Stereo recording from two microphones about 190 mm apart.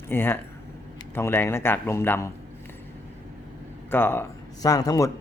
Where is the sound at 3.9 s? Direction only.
10° left (ahead or behind).